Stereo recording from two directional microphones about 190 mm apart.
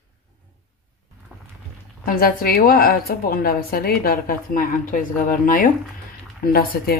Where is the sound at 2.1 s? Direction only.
50° left (ahead or behind).